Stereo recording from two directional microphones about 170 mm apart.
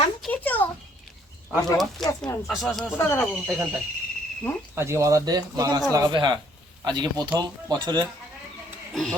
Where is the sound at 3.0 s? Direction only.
15° left (ahead or behind).